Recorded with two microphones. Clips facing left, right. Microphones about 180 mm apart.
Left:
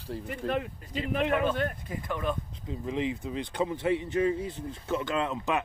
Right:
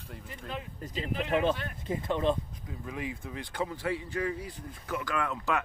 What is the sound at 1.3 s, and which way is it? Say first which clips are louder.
Speech: left 1 dB; 25° right (ahead or behind).